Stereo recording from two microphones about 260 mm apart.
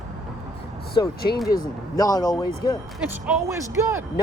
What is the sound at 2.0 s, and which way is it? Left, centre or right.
Speech, centre.